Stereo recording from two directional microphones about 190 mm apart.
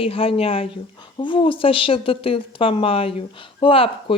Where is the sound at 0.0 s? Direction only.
30° left (ahead or behind).